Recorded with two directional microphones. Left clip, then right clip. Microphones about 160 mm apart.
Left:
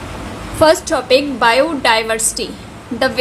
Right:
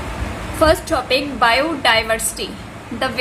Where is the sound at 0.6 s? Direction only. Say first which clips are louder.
Left 3 dB; 55° left (ahead or behind).